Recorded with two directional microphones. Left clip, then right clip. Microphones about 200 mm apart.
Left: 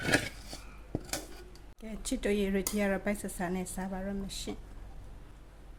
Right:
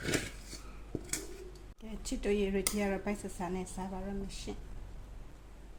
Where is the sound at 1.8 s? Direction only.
35° left (ahead or behind).